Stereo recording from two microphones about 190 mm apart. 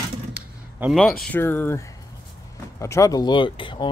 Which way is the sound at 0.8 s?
5° right (ahead or behind).